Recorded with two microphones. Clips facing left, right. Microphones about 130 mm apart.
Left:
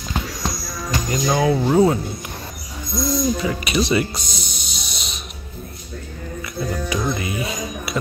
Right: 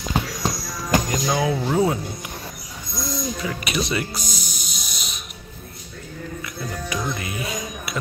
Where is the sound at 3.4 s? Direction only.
Centre (ahead or behind).